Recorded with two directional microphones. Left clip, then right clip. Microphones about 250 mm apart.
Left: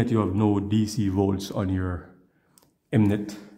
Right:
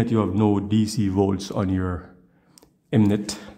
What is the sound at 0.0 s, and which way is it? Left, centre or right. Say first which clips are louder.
Speech: right 2 dB; centre.